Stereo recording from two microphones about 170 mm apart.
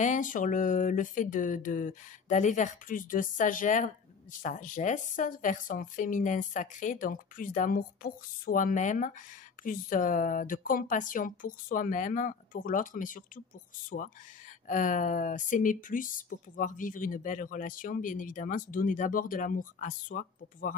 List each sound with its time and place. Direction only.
0.0 s speech: 50° left (ahead or behind)